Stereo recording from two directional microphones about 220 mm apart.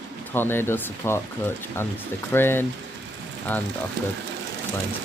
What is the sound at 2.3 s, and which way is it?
Speech, 10° left (ahead or behind).